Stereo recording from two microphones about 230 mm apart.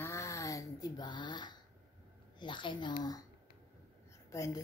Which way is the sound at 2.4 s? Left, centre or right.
Left.